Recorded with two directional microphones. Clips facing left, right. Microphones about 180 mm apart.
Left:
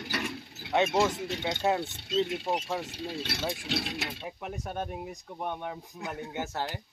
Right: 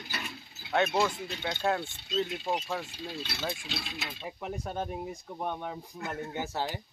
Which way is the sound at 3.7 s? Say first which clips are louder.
Left 6 dB; 70° left (ahead or behind).